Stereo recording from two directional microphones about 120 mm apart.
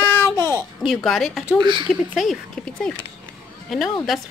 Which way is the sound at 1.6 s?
40° right (ahead or behind).